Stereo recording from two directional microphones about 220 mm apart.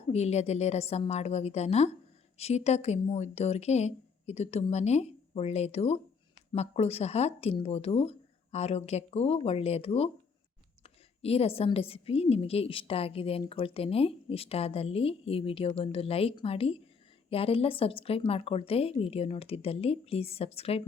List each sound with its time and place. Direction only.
0.1 s a woman's voice: 30° left (ahead or behind)